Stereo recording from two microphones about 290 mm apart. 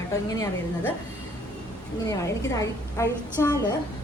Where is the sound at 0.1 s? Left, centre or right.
Centre.